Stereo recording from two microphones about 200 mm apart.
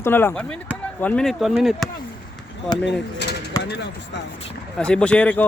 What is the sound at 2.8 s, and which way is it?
Mechanisms, 60° left (ahead or behind).